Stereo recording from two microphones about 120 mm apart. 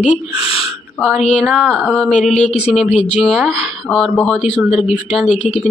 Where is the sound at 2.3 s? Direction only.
70° left (ahead or behind).